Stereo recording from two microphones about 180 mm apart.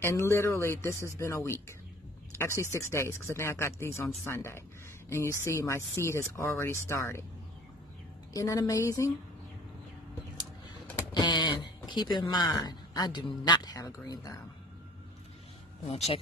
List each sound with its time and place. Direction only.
0.0 s speech: 15° left (ahead or behind)
8.3 s speech: 20° left (ahead or behind)
11.1 s speech: 25° left (ahead or behind)